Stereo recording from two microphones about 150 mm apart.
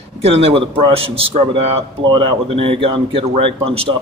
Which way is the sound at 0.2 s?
40° right (ahead or behind).